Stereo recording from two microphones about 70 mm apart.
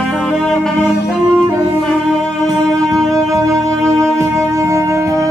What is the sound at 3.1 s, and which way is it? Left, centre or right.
Music, right.